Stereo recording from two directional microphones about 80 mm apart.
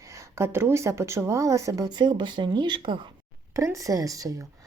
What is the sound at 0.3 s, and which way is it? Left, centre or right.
Speech, right.